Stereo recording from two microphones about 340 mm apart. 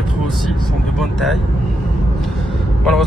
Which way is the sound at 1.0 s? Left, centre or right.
Centre.